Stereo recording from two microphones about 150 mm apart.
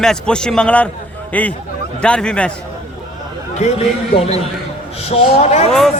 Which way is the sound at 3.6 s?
50° left (ahead or behind).